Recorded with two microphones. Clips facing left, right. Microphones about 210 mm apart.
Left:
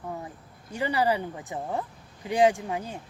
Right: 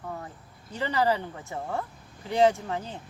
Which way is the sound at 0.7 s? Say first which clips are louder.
Even; 15° left (ahead or behind).